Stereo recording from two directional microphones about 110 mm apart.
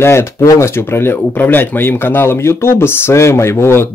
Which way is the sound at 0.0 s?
25° left (ahead or behind).